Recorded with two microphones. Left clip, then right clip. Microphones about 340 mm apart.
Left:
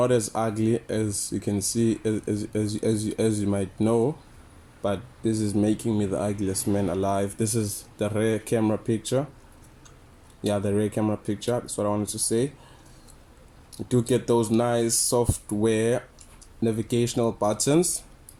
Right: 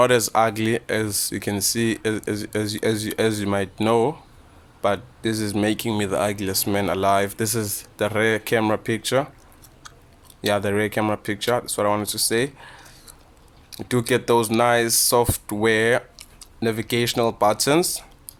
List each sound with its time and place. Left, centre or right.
0.0 s speech: right
3.8 s speech: right
4.8 s speech: right
6.7 s speech: right
10.4 s speech: right
13.7 s speech: right
15.6 s a sound: right
16.9 s speech: right